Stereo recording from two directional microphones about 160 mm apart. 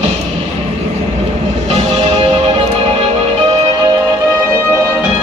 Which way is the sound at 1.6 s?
40° right (ahead or behind).